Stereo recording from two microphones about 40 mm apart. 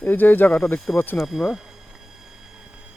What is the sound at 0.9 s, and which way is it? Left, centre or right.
Speech, left.